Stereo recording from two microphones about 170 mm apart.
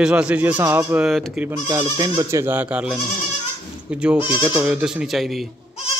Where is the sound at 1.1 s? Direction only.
Centre (ahead or behind).